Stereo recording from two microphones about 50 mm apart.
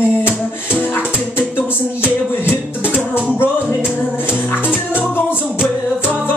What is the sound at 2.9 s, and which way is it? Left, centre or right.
Music, right.